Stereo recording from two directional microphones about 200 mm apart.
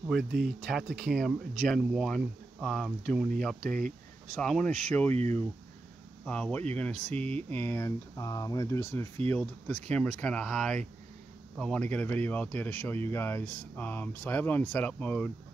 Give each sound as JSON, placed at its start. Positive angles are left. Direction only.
{"t": 0.1, "sound": "speech", "side_deg": 0}
{"t": 3.6, "sound": "speech", "side_deg": -40}
{"t": 4.4, "sound": "speech", "side_deg": 5}
{"t": 5.1, "sound": "speech", "side_deg": -35}
{"t": 6.2, "sound": "speech", "side_deg": 5}